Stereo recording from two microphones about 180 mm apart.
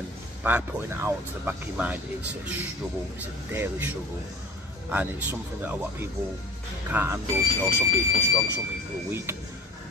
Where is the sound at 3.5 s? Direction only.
15° right (ahead or behind).